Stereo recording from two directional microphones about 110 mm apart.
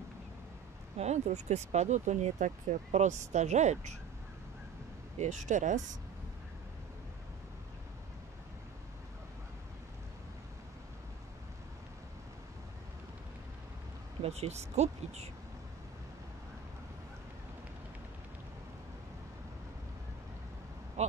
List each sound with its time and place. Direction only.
0.9 s speech: 90° right
5.2 s speech: 90° right
14.2 s speech: 70° right (ahead or behind)
21.0 s owl: 85° right